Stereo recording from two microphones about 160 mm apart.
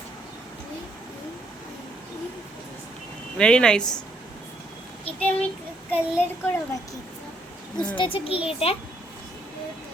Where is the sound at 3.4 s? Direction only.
5° left (ahead or behind).